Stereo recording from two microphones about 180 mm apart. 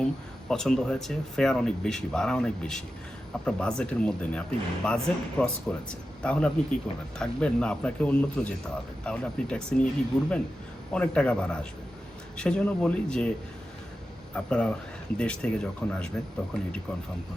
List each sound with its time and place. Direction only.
0.0 s a man's voice: 5° left (ahead or behind)
14.3 s a man's voice: 5° left (ahead or behind)